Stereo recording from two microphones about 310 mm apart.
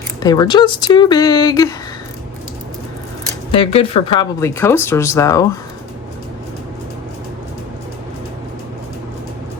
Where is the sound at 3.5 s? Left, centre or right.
Centre.